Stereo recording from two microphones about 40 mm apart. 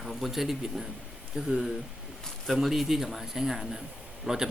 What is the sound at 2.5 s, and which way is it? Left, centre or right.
Speech, centre.